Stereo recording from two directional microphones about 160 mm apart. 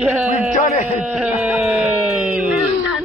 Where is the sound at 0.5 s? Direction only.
45° left (ahead or behind).